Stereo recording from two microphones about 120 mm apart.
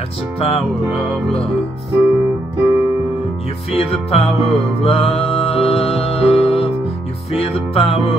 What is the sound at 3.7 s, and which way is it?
Music, 55° left (ahead or behind).